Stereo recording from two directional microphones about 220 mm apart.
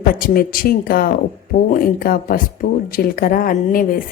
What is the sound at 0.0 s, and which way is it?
A woman's voice, 40° left (ahead or behind).